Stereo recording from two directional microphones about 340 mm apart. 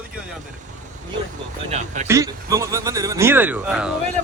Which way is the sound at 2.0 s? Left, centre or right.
Centre.